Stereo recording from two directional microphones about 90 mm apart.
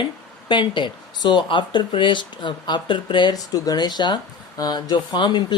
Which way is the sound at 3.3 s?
45° left (ahead or behind).